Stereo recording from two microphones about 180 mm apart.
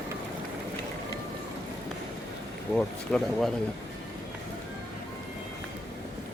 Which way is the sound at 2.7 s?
5° left (ahead or behind).